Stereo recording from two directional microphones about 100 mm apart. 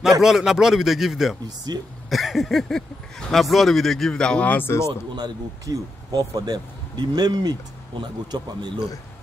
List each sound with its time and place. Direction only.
0.2 s speech: 5° right (ahead or behind)
1.7 s speech: 45° right (ahead or behind)
2.0 s speech: centre (ahead or behind); by 4.9 s 25° left (ahead or behind)
5.1 s speech: 45° right (ahead or behind)